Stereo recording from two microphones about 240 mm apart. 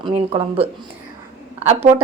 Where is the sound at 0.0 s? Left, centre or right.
Right.